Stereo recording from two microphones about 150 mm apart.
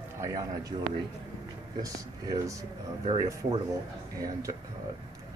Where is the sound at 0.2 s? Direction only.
25° right (ahead or behind).